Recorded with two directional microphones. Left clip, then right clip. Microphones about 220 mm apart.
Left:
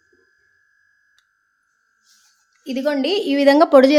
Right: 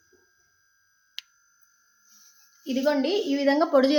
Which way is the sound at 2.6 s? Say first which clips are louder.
Left 4 dB; 30° left (ahead or behind).